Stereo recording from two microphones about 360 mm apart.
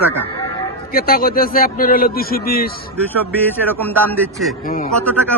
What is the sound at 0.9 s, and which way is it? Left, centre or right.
Speech, left.